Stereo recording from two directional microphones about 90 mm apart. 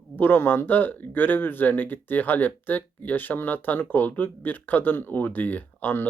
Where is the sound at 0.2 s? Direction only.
20° left (ahead or behind).